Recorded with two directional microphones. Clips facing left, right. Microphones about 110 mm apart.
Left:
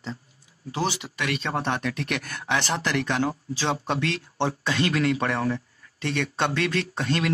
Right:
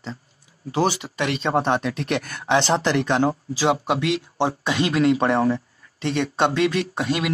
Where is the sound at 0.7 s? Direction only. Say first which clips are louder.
Right 6 dB; 45° right (ahead or behind).